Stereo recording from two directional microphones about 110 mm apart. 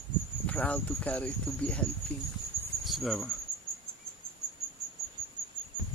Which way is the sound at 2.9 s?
Centre (ahead or behind).